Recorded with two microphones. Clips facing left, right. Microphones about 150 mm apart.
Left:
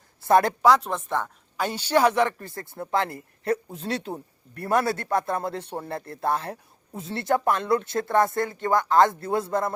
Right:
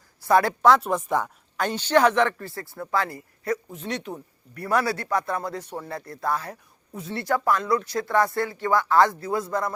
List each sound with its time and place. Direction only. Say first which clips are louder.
0.2 s speech: left 1 dB; 20° left (ahead or behind)
0.6 s speech: right 1 dB; centre (ahead or behind)
0.9 s speech: right 3 dB; 10° right (ahead or behind)
1.5 s a man's voice: right 2 dB; 10° left (ahead or behind); by 9.7 s 25° left (ahead or behind)